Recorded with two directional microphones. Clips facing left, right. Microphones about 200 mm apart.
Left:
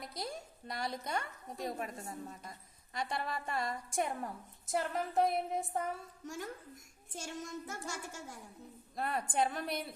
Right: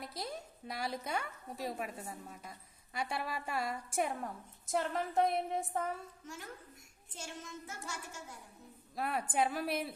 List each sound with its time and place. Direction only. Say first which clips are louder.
0.0 s a woman's voice: even; centre (ahead or behind)
7.1 s child singing: left 4 dB; 45° left (ahead or behind)
9.0 s a woman's voice: even; 5° right (ahead or behind)